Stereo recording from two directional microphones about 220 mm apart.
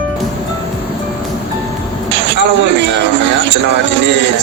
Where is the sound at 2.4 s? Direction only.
55° right (ahead or behind).